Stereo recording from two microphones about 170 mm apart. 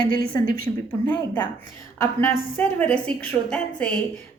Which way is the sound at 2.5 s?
10° left (ahead or behind).